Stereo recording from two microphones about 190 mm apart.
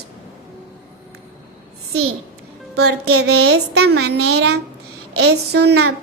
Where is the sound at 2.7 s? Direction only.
60° right (ahead or behind).